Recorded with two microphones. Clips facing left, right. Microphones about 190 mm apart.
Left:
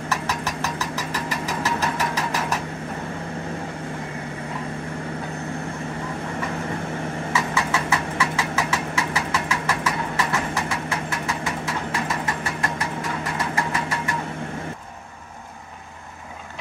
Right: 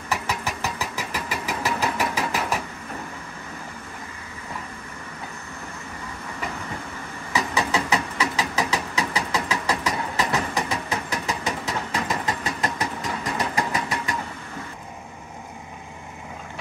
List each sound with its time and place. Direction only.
0.1 s engine: 10° right (ahead or behind)
7.3 s engine: 20° right (ahead or behind)